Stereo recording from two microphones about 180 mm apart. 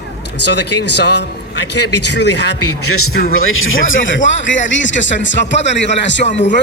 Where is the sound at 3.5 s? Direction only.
90° left.